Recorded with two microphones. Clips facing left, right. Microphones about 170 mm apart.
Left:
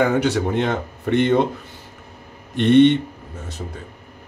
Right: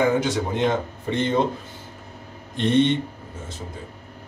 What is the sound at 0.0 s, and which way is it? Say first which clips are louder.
A man's voice: left 3 dB; 65° left (ahead or behind).